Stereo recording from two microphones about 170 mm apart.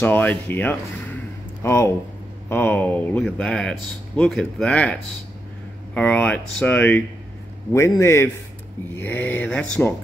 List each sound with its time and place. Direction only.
0.0 s speech: 10° left (ahead or behind)
5.9 s speech: 5° left (ahead or behind)